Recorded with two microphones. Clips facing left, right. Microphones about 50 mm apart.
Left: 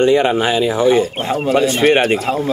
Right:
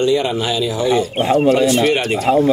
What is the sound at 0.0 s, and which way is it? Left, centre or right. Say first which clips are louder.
Speech: left 4 dB; left.